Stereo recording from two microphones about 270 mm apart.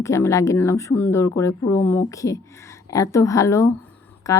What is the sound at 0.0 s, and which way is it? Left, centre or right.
Speech, centre.